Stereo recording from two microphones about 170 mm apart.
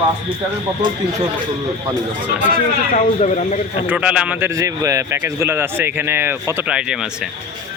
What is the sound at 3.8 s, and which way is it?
A man's voice, 5° right (ahead or behind).